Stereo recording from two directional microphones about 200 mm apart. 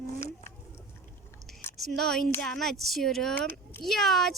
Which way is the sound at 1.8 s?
Centre (ahead or behind).